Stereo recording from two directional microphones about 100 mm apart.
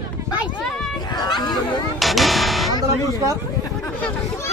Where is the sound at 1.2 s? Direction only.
45° left (ahead or behind).